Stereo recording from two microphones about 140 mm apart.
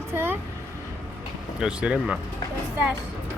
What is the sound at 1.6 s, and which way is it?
Speech, 5° right (ahead or behind).